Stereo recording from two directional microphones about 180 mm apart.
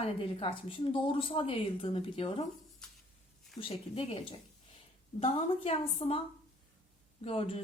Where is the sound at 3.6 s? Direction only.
30° left (ahead or behind).